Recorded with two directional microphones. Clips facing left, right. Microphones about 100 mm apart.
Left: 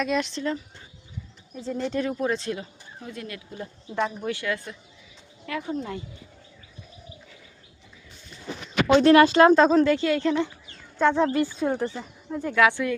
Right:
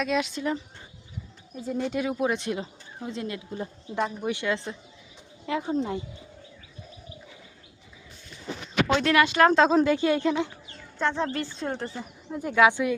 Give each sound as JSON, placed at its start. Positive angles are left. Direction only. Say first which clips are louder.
{"t": 0.0, "sound": "speech", "louder": "left 1 dB", "side_deg": -5}
{"t": 1.8, "sound": "speech", "louder": "even", "side_deg": -10}
{"t": 9.0, "sound": "speech", "louder": "left 9 dB", "side_deg": 35}
{"t": 9.5, "sound": "speech", "louder": "left 3 dB", "side_deg": 0}
{"t": 9.7, "sound": "a woman's voice", "louder": "left 1 dB", "side_deg": -15}
{"t": 11.0, "sound": "speech", "louder": "left 6 dB", "side_deg": 15}
{"t": 11.9, "sound": "a woman's voice", "louder": "left 2 dB", "side_deg": -10}